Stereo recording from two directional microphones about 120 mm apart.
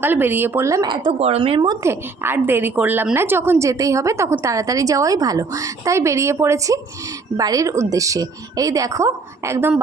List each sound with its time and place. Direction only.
0.0 s speech: 15° right (ahead or behind)
1.2 s speech: 55° right (ahead or behind)
1.8 s a woman's voice: 20° right (ahead or behind)